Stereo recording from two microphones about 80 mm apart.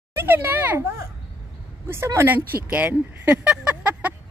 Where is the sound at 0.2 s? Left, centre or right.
Right.